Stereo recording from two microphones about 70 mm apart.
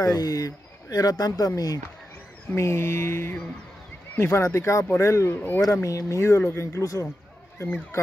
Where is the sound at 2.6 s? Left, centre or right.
Left.